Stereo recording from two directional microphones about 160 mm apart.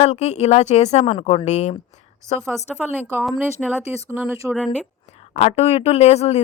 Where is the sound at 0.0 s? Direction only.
45° left (ahead or behind).